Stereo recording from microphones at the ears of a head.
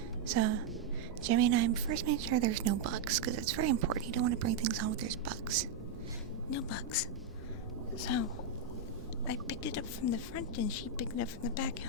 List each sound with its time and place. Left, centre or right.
0.3 s a woman's voice: right
6.5 s speech: left
9.2 s speech: left